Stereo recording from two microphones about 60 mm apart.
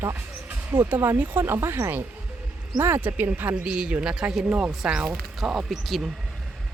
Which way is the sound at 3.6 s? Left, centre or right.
Centre.